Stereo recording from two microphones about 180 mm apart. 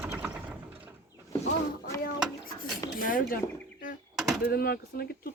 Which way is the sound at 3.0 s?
50° left (ahead or behind).